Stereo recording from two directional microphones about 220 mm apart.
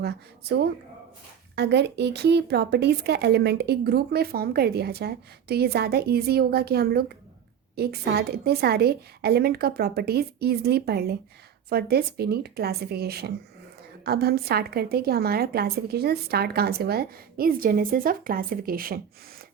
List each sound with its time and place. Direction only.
0.0 s speech: 50° right (ahead or behind)